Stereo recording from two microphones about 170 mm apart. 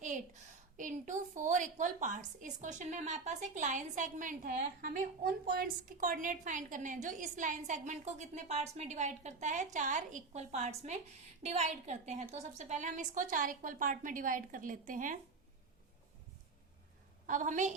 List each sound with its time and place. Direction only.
0.0 s a sound: 50° right (ahead or behind)
0.8 s a woman's voice: 50° right (ahead or behind)
17.2 s a woman's voice: 50° right (ahead or behind)